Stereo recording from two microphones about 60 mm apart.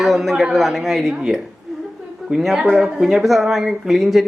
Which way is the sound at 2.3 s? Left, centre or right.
Centre.